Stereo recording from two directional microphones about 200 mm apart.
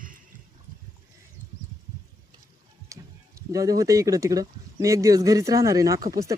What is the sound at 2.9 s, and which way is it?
Tick-tock, 15° right (ahead or behind).